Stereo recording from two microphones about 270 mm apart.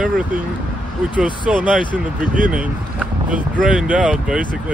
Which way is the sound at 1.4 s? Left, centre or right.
Centre.